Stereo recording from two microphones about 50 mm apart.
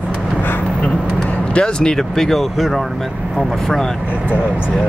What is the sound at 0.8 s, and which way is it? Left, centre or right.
Speech, left.